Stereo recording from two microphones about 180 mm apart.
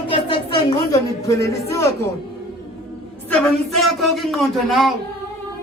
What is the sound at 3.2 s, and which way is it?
Speech, centre (ahead or behind).